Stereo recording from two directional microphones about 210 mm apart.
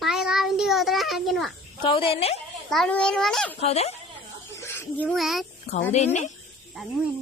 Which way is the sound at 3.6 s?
30° left (ahead or behind).